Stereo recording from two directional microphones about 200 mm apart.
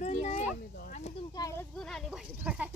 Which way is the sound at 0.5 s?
45° left (ahead or behind).